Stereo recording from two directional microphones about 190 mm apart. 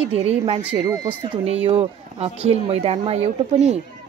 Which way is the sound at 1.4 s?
30° right (ahead or behind).